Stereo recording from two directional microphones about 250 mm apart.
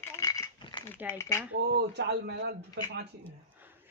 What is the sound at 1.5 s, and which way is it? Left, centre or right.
Speech, right.